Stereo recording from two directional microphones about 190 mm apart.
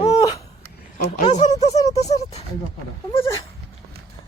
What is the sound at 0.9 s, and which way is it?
Speech, 40° left (ahead or behind).